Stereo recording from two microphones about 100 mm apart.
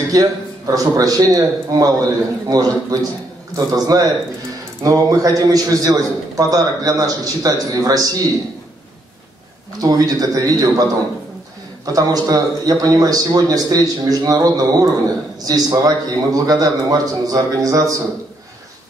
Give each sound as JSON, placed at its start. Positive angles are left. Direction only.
{"t": 0.1, "sound": "a man's voice", "side_deg": -35}
{"t": 9.8, "sound": "a man's voice", "side_deg": -40}